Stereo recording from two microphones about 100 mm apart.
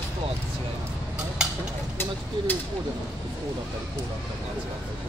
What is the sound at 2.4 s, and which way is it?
Speech, 50° right (ahead or behind).